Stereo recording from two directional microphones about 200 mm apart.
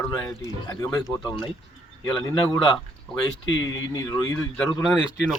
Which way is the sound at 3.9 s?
20° left (ahead or behind).